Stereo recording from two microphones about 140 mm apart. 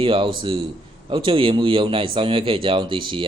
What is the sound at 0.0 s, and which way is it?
Speech, 40° right (ahead or behind).